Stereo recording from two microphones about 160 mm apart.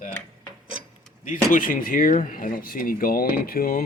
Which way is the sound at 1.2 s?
55° left (ahead or behind).